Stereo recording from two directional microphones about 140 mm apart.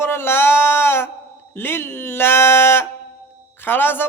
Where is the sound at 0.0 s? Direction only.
15° left (ahead or behind).